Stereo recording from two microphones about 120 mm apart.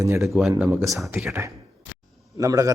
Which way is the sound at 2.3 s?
30° right (ahead or behind).